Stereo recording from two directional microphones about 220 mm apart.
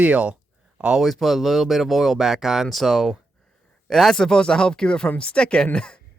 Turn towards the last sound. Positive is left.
turn(degrees=5)  # may be behind; listen again after turning